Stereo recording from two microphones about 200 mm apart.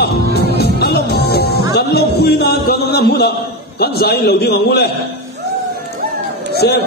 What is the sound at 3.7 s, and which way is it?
A man's voice, 50° left (ahead or behind).